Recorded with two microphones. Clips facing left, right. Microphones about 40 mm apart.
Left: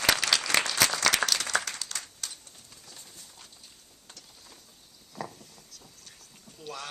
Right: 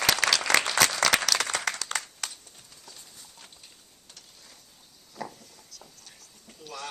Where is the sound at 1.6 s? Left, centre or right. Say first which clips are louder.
Right 7 dB; right.